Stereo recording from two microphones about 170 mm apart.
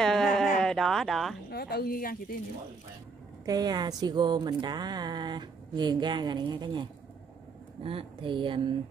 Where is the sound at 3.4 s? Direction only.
25° right (ahead or behind).